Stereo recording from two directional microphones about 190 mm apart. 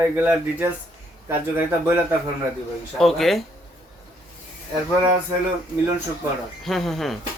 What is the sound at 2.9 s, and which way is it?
Speech, centre (ahead or behind).